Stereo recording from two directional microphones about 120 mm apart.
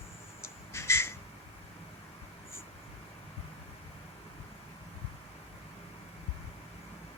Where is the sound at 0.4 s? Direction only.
20° left (ahead or behind).